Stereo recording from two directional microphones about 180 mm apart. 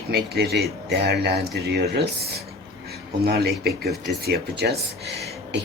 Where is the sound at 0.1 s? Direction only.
65° right (ahead or behind).